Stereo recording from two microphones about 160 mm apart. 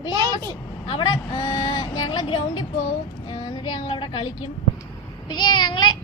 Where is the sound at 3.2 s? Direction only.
25° left (ahead or behind).